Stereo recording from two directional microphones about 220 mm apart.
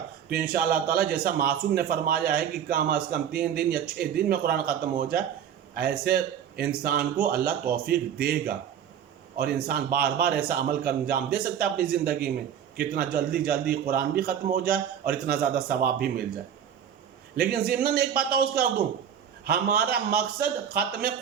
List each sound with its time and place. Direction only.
0.3 s a man's voice: 45° right (ahead or behind)
17.3 s a man's voice: 45° right (ahead or behind)